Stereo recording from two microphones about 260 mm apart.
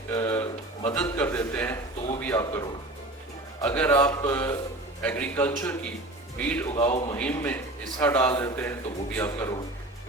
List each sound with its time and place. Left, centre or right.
0.1 s a sound: centre
3.6 s a man's voice: centre
6.7 s a man's voice: centre
7.2 s a man's voice: centre